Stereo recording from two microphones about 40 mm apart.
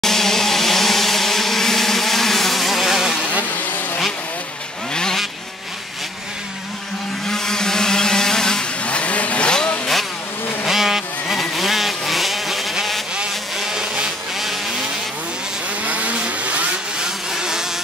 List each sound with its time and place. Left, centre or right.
0.0 s a sound: centre
7.2 s vehicle: centre
8.8 s vehicle: left
9.5 s vehicle: left
10.7 s vehicle: centre
13.6 s a sound: centre
15.8 s vehicle: right
17.3 s vehicle: centre